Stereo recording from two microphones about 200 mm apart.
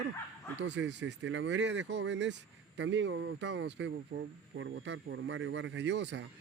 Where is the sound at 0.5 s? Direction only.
65° right (ahead or behind).